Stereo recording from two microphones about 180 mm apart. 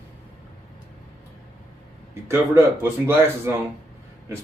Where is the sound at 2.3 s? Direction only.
15° right (ahead or behind).